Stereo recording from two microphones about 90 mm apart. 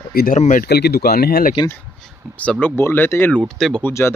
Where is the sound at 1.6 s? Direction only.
55° left (ahead or behind).